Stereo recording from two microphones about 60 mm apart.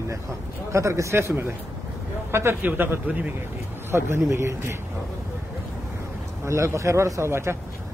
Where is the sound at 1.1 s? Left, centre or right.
Right.